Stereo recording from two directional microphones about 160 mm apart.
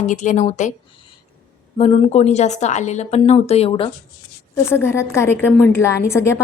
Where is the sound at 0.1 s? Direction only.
50° left (ahead or behind).